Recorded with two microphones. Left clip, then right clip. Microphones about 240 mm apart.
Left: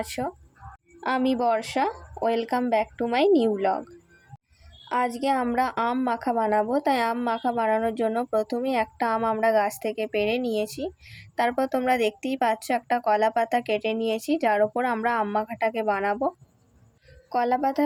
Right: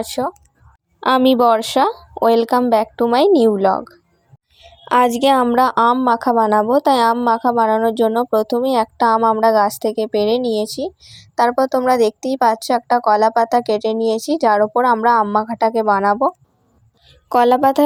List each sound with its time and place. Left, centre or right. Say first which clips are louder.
0.0 s a woman's voice: right 9 dB; right
4.9 s a woman's voice: right 11 dB; right
17.2 s a woman's voice: right 11 dB; right